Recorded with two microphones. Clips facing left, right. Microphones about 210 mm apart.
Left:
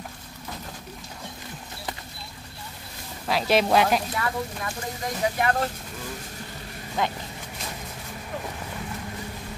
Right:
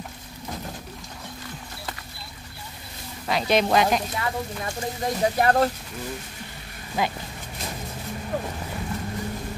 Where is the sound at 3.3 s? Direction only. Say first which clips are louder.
Even; 5° left (ahead or behind).